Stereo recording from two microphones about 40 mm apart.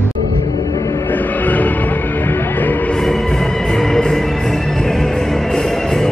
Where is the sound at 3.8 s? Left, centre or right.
Centre.